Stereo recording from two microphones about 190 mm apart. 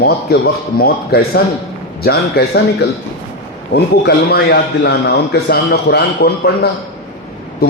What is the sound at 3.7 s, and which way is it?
A man's voice, 55° left (ahead or behind).